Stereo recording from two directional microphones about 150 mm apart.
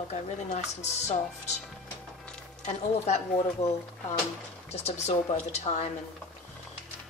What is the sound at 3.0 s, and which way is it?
Speech, 45° left (ahead or behind).